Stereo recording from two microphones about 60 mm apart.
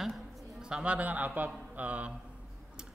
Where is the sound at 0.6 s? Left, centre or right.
Centre.